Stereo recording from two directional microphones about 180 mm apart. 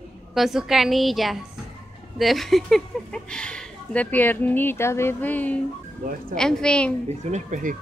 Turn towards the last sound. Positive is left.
turn(degrees=-45)  # may be behind; listen again after turning